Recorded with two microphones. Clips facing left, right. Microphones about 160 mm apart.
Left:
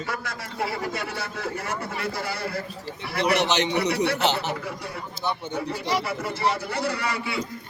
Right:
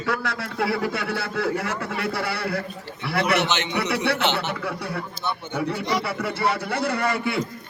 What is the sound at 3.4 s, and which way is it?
Speech, 35° left (ahead or behind).